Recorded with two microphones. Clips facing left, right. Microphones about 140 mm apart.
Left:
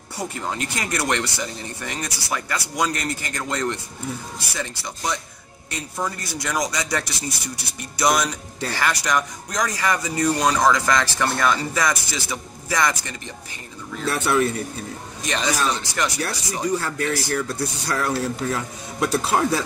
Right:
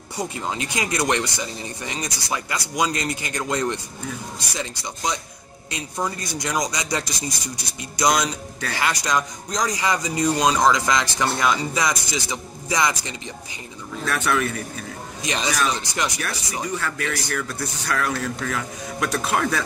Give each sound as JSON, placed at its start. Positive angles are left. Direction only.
{"t": 0.2, "sound": "speech", "side_deg": -15}
{"t": 14.0, "sound": "speech", "side_deg": 30}
{"t": 15.2, "sound": "speech", "side_deg": -15}
{"t": 16.7, "sound": "speech", "side_deg": 30}